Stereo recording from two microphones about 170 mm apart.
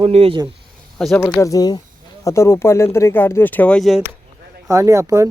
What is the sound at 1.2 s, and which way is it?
Speech, 15° left (ahead or behind).